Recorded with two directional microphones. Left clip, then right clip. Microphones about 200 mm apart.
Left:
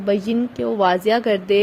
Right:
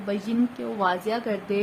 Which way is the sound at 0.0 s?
35° left (ahead or behind).